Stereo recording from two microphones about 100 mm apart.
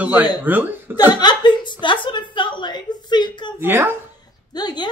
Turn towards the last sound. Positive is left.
turn(degrees=45)  # may be behind; listen again after turning